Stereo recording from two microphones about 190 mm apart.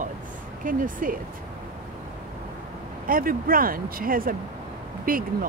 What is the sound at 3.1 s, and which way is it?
Speech, 50° right (ahead or behind).